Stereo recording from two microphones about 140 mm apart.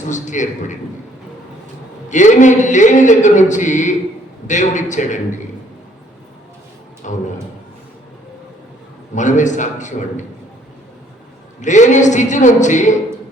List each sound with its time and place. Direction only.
0.1 s a man's voice: 60° left (ahead or behind)
2.0 s a man's voice: 60° left (ahead or behind)
7.0 s a man's voice: 65° left (ahead or behind)
9.1 s a man's voice: 60° left (ahead or behind)
11.6 s a man's voice: 60° left (ahead or behind)